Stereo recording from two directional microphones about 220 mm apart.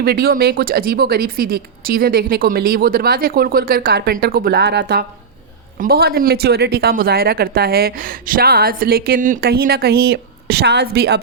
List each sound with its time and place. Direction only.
0.0 s speech: 45° right (ahead or behind)